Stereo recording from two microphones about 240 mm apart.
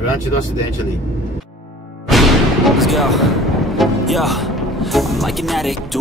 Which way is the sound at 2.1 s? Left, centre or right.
Centre.